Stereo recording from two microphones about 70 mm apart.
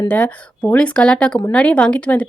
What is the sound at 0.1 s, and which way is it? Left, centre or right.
Speech, left.